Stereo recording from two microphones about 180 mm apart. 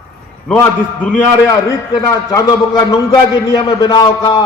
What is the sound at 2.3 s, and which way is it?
A man's voice, 20° left (ahead or behind).